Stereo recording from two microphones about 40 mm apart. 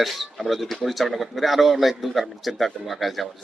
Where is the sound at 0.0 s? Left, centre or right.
Centre.